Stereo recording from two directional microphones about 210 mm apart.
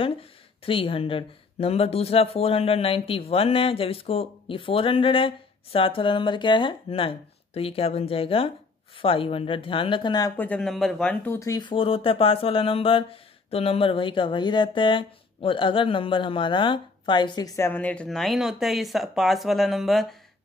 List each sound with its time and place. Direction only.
0.7 s speech: 25° left (ahead or behind); by 20.2 s centre (ahead or behind)